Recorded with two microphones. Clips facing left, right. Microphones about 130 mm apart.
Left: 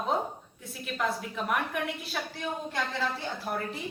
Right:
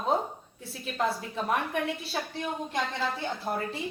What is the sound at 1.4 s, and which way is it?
Speech, 30° right (ahead or behind).